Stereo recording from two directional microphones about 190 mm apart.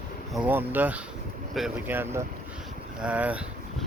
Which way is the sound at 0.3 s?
10° right (ahead or behind).